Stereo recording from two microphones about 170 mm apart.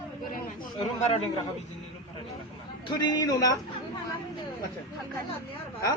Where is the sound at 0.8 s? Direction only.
35° left (ahead or behind).